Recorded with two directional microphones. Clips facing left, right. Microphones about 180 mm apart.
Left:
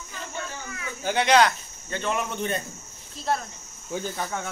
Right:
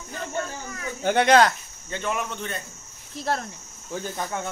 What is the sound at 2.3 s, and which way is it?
Speech, 20° left (ahead or behind).